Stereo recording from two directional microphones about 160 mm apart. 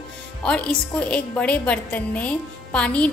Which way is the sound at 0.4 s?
5° left (ahead or behind).